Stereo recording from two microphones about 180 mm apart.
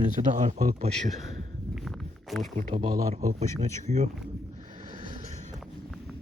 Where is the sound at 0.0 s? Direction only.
45° right (ahead or behind).